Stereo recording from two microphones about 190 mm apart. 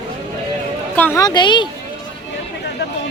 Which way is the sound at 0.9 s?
10° left (ahead or behind).